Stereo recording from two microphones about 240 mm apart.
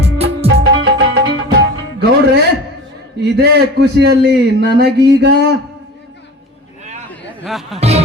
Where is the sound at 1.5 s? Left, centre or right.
Right.